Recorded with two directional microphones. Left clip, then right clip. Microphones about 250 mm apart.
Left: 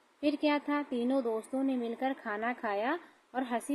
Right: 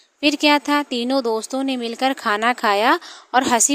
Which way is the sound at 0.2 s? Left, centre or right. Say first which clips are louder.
Right 14 dB; right.